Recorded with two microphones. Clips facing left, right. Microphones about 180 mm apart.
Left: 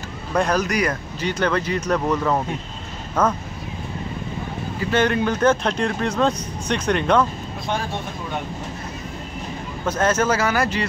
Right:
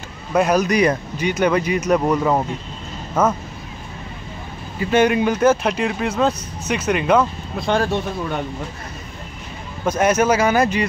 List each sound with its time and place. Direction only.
0.3 s speech: 10° right (ahead or behind)
0.7 s speech: 20° right (ahead or behind)
4.9 s speech: 15° right (ahead or behind)
7.7 s speech: 90° right
9.8 s speech: 15° right (ahead or behind)